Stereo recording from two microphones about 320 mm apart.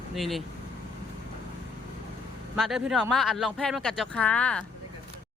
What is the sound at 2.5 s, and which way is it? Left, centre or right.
Speech, centre.